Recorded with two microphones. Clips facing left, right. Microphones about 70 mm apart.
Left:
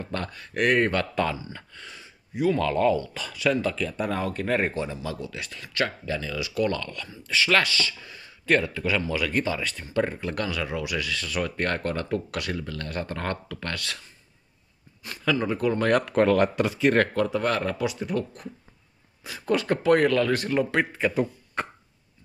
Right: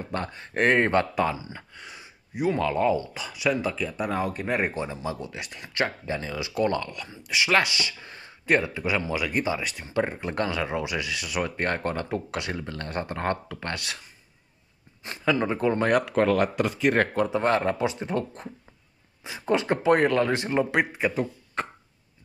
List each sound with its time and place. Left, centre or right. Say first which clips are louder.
0.0 s speech: right 1 dB; right
1.1 s speech: right 1 dB; centre
8.0 s a sound: right 1 dB; right
8.5 s speech: even; centre
15.0 s speech: right 1 dB; right
15.9 s speech: left 3 dB; centre
17.1 s speech: right 1 dB; right
21.1 s speech: left 2 dB; centre